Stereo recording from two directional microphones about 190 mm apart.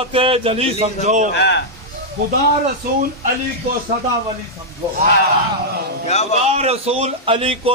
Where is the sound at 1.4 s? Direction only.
65° left (ahead or behind).